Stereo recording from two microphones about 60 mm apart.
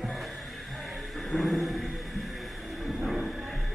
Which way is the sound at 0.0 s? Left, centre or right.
Centre.